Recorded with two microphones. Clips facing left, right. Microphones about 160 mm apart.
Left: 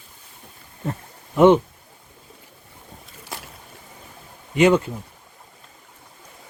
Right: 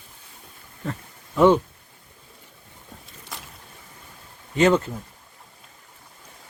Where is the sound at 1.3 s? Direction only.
20° left (ahead or behind).